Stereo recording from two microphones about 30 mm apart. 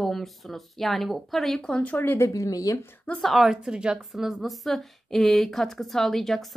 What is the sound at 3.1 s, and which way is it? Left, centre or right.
Speech, left.